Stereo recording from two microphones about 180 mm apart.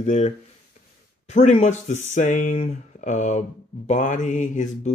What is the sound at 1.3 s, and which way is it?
Speech, 40° left (ahead or behind).